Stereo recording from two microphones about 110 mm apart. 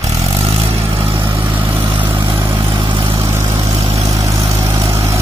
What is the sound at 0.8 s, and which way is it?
Vehicle, 20° right (ahead or behind).